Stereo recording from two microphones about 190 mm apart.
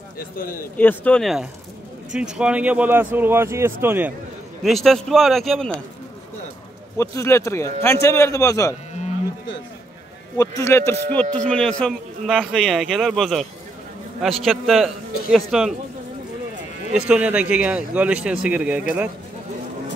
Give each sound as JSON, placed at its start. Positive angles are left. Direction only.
{"t": 0.2, "sound": "a man's voice", "side_deg": 50}
{"t": 0.7, "sound": "a man's voice", "side_deg": 10}
{"t": 4.6, "sound": "speech", "side_deg": 0}
{"t": 7.0, "sound": "a man's voice", "side_deg": 15}
{"t": 10.3, "sound": "a man's voice", "side_deg": 15}
{"t": 16.9, "sound": "a man's voice", "side_deg": -5}